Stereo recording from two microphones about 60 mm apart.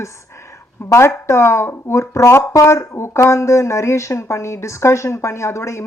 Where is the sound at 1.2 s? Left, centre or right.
Left.